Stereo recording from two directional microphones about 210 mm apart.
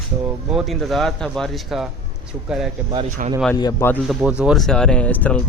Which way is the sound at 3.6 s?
15° left (ahead or behind).